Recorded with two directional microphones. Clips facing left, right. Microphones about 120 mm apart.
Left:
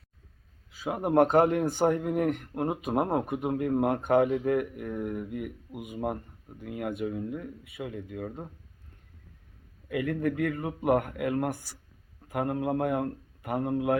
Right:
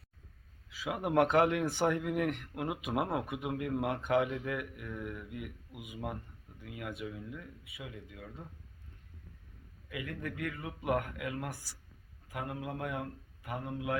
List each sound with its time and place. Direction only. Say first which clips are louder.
0.7 s speech: left 6 dB; 45° left (ahead or behind)
9.9 s speech: left 12 dB; 50° left (ahead or behind)